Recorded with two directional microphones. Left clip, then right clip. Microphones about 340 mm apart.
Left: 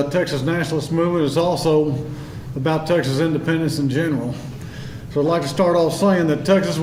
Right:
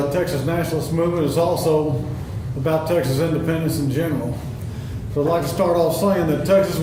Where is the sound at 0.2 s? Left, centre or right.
Left.